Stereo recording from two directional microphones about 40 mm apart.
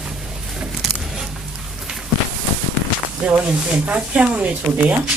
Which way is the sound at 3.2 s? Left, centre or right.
Right.